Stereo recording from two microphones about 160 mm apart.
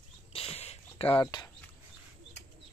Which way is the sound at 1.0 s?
10° left (ahead or behind).